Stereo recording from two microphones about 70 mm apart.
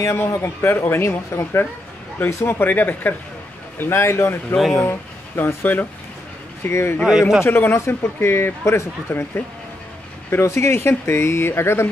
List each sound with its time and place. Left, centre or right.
0.0 s a man's voice: left
4.6 s speech: centre
4.8 s speech: left
6.7 s a man's voice: left
7.1 s a man's voice: centre
7.4 s a man's voice: left
10.4 s a man's voice: left